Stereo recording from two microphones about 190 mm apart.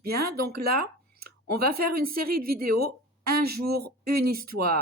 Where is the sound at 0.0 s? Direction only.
55° right (ahead or behind).